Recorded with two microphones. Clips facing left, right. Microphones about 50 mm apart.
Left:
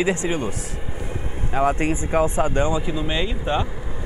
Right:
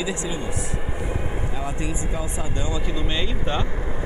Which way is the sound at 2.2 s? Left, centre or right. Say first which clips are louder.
Left 9 dB; left.